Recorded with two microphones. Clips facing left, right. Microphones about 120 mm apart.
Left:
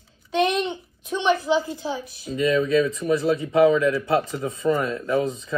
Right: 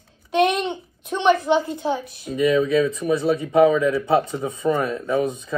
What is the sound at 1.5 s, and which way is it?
Speech, 25° right (ahead or behind).